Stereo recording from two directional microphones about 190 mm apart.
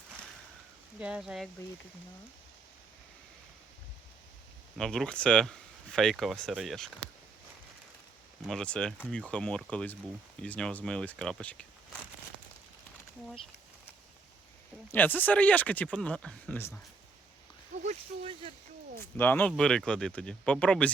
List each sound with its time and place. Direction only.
0.9 s speech: 5° right (ahead or behind)
4.8 s speech: 5° left (ahead or behind)
8.4 s speech: 5° left (ahead or behind)
14.9 s speech: 10° left (ahead or behind)
17.8 s a sound: 30° right (ahead or behind)
19.1 s speech: 10° left (ahead or behind)